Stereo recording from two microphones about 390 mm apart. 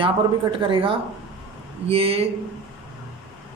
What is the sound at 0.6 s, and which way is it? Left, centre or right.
Speech, centre.